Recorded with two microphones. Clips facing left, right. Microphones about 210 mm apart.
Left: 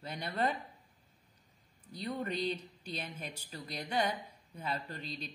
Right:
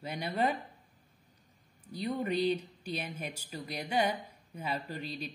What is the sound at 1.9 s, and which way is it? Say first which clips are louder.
Speech: right 4 dB; 10° right (ahead or behind).